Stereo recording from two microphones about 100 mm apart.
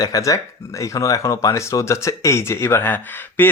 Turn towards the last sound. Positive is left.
turn(degrees=20)  # may be behind; listen again after turning